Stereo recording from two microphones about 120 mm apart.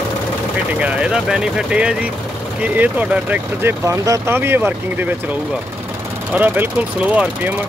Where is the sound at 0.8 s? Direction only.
5° right (ahead or behind).